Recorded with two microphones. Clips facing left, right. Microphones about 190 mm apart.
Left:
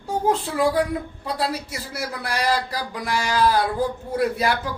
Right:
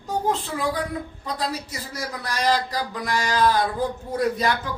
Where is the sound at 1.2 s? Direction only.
10° left (ahead or behind).